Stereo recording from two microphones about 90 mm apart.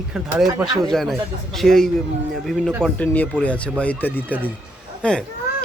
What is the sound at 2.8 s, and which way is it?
Speech, 15° left (ahead or behind).